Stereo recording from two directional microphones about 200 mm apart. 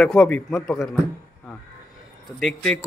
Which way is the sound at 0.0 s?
5° left (ahead or behind).